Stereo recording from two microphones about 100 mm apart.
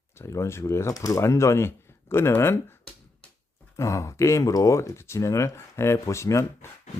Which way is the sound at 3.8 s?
30° left (ahead or behind).